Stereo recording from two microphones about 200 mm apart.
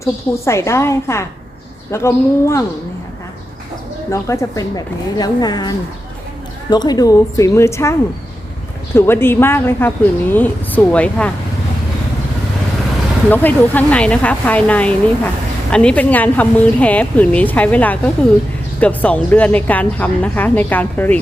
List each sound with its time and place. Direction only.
0.0 s speech: 15° left (ahead or behind)
4.1 s a woman's voice: 15° left (ahead or behind)
9.0 s speech: 10° left (ahead or behind)
13.3 s speech: 10° left (ahead or behind)